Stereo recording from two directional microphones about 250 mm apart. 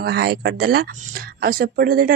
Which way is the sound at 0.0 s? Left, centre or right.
Right.